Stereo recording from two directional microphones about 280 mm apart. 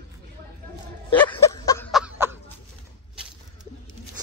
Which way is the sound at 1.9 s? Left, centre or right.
Centre.